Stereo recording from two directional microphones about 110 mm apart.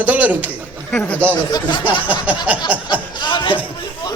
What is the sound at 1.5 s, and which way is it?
Speech, 40° left (ahead or behind).